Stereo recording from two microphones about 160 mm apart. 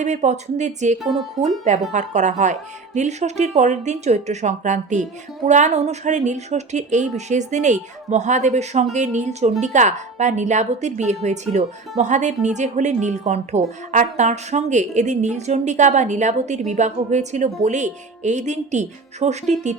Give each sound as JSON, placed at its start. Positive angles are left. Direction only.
{"t": 0.0, "sound": "speech", "side_deg": -45}